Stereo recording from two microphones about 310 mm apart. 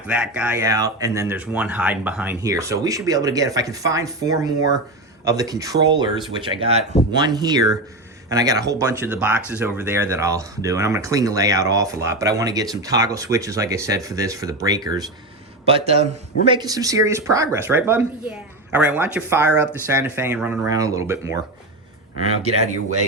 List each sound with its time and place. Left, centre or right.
0.1 s speech: centre